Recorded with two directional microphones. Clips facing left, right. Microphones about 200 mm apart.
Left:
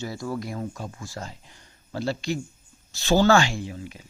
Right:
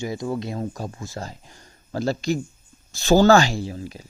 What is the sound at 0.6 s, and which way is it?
Speech, 40° right (ahead or behind).